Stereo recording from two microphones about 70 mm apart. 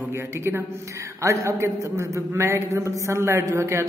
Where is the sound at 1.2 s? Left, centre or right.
Right.